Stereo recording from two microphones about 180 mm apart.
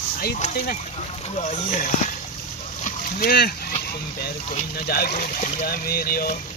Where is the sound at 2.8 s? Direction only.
55° left (ahead or behind).